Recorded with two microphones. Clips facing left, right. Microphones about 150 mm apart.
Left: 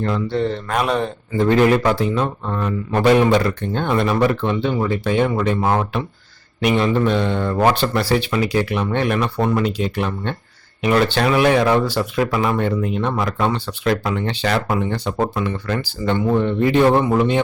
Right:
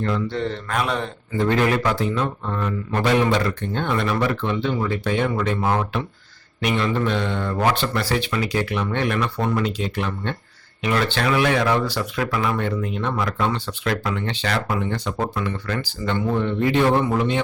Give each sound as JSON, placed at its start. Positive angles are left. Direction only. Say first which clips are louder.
{"t": 0.0, "sound": "speech", "louder": "left 3 dB", "side_deg": 35}